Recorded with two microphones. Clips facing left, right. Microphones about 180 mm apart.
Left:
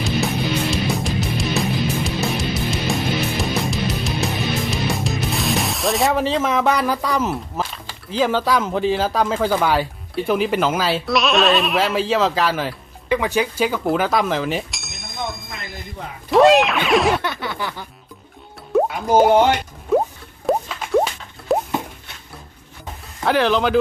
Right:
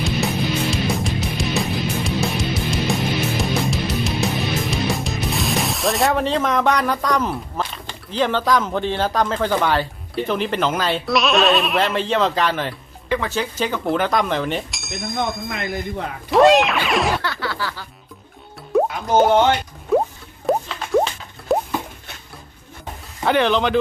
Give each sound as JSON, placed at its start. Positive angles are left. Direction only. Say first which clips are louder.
{"t": 0.0, "sound": "music", "louder": "even", "side_deg": 0}
{"t": 10.2, "sound": "speech", "louder": "left 3 dB", "side_deg": 5}
{"t": 15.5, "sound": "speech", "louder": "right 8 dB", "side_deg": -60}
{"t": 16.3, "sound": "speech", "louder": "left 1 dB", "side_deg": 0}
{"t": 17.2, "sound": "a sound", "louder": "even", "side_deg": 20}
{"t": 18.7, "sound": "plop", "louder": "left 1 dB", "side_deg": 0}
{"t": 23.2, "sound": "speech", "louder": "even", "side_deg": 0}